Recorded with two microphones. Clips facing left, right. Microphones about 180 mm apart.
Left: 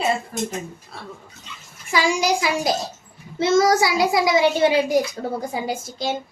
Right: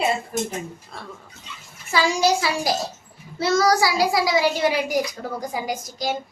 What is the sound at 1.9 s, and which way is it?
A child's voice, 15° left (ahead or behind).